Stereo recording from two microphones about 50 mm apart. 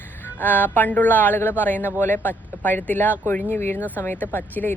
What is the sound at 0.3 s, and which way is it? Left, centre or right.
Speech, left.